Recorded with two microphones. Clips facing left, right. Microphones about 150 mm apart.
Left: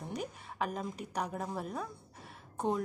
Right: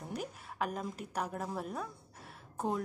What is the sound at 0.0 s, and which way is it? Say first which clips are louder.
A woman's voice: left 1 dB; centre (ahead or behind).